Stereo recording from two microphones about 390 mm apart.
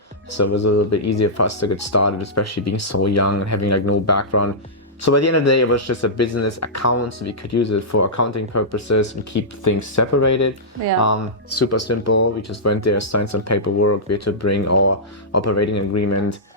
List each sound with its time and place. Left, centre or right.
0.3 s speech: left